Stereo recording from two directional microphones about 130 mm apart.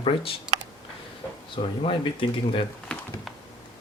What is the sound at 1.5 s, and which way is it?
Speech, 40° left (ahead or behind).